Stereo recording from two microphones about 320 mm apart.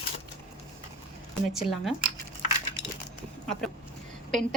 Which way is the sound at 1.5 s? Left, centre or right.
Centre.